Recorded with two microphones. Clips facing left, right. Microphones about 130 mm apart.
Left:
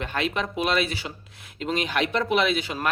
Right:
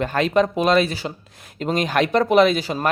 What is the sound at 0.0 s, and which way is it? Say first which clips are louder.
Speech: right 9 dB; 40° right (ahead or behind).